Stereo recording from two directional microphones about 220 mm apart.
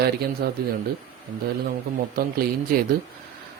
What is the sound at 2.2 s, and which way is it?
Speech, 40° right (ahead or behind).